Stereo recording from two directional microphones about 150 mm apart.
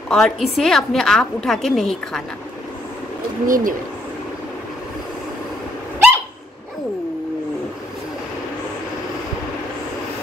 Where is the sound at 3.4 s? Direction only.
65° right (ahead or behind).